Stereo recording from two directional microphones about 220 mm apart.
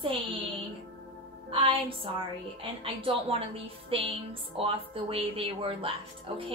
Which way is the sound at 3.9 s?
25° right (ahead or behind).